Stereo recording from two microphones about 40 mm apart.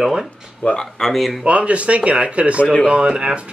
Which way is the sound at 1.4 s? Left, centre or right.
Right.